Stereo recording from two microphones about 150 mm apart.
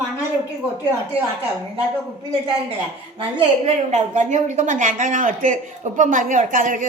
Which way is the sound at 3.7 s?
50° right (ahead or behind).